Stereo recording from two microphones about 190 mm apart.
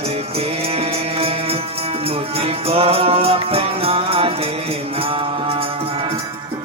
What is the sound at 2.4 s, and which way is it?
Music, 30° right (ahead or behind).